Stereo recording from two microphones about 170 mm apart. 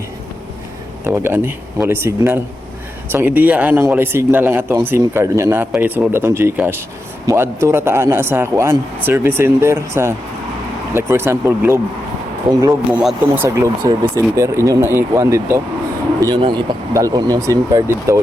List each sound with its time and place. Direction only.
1.0 s a man's voice: 15° right (ahead or behind)
12.9 s a man's voice: 5° right (ahead or behind)
16.2 s speech: 25° right (ahead or behind)